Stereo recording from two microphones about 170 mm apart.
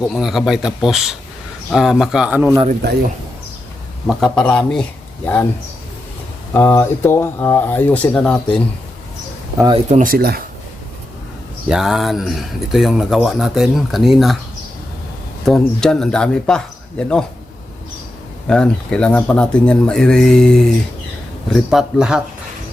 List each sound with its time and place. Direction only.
0.1 s speech: centre (ahead or behind)
4.0 s speech: 5° left (ahead or behind)
6.5 s speech: 15° left (ahead or behind)
9.6 s speech: 25° right (ahead or behind)
9.9 s speech: 55° right (ahead or behind)
11.7 s speech: centre (ahead or behind)
15.4 s speech: 5° left (ahead or behind)
18.4 s speech: 5° left (ahead or behind)